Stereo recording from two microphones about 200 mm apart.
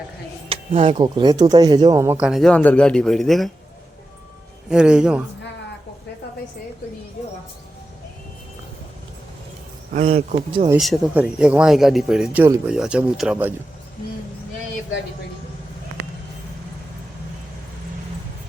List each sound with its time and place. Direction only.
0.4 s speech: 30° right (ahead or behind); by 3.5 s centre (ahead or behind)
4.7 s speech: 5° right (ahead or behind)
9.9 s speech: 30° right (ahead or behind)
10.8 s speech: centre (ahead or behind)